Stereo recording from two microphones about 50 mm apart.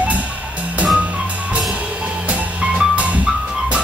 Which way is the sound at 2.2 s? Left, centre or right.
Right.